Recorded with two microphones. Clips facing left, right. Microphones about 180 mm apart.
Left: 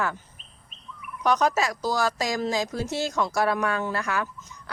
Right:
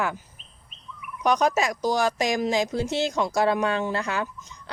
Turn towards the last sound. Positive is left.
turn(degrees=-25)  # may be behind; listen again after turning